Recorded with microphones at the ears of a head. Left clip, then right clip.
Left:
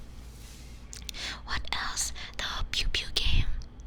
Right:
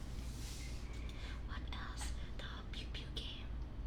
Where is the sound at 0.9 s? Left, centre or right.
Left.